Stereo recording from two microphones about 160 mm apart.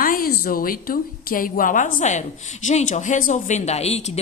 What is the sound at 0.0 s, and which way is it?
A woman's voice, 65° left (ahead or behind).